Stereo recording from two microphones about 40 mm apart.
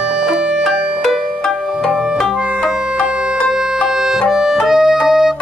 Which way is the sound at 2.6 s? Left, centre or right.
Right.